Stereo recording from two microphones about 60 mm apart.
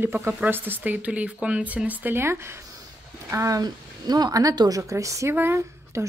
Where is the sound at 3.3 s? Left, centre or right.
Right.